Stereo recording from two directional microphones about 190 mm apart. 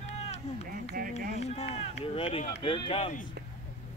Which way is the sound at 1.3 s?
35° left (ahead or behind).